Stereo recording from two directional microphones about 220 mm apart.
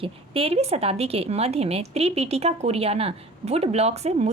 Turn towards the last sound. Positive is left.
turn(degrees=-30)  # may be behind; listen again after turning